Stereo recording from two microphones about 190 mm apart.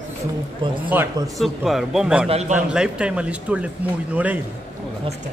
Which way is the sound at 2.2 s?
35° right (ahead or behind).